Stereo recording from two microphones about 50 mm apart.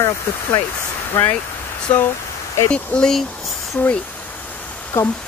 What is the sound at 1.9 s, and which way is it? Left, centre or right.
Speech, left.